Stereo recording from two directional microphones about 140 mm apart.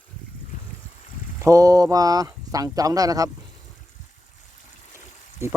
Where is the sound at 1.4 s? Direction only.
25° right (ahead or behind).